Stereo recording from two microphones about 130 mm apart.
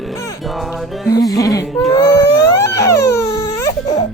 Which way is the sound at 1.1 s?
30° left (ahead or behind).